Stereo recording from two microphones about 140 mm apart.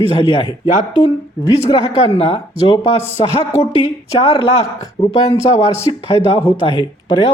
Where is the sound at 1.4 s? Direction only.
25° left (ahead or behind).